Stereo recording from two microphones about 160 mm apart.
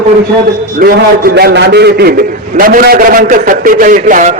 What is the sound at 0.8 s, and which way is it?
A man's voice, 70° right (ahead or behind).